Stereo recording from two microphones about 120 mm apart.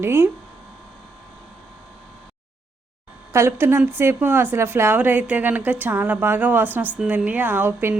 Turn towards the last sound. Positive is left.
turn(degrees=-15)  # may be behind; listen again after turning